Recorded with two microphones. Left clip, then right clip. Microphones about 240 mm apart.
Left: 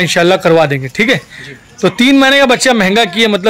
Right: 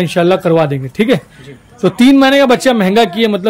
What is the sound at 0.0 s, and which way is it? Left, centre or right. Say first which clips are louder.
A man's voice: left 2 dB; centre.